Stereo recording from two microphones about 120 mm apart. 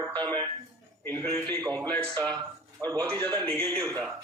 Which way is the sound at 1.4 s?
35° right (ahead or behind).